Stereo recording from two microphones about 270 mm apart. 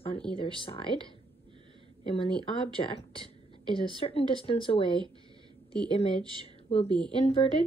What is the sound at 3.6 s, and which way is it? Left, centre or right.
Speech, centre.